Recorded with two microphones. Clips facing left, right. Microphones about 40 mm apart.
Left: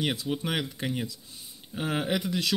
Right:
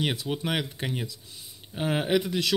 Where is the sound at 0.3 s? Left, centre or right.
Right.